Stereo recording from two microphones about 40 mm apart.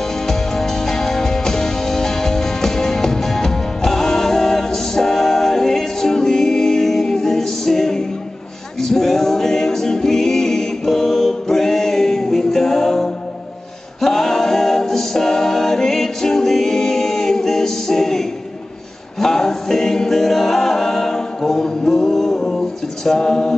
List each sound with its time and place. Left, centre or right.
0.3 s music: centre